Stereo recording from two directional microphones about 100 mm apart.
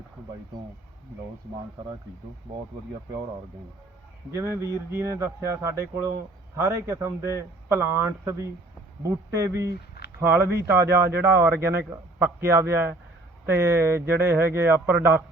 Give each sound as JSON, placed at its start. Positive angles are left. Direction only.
{"t": 4.3, "sound": "speech", "side_deg": -30}